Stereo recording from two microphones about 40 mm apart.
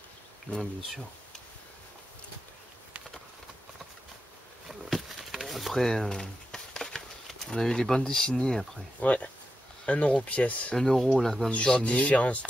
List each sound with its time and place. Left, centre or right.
0.5 s speech: left
4.8 s a sound: centre
6.0 s a sound: centre
7.4 s speech: centre
9.0 s speech: left
11.1 s speech: centre
11.6 s speech: left